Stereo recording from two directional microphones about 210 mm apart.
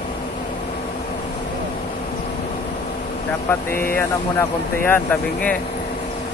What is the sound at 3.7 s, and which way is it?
Speech, 45° left (ahead or behind).